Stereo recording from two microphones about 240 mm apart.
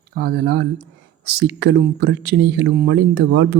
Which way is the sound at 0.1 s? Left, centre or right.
Right.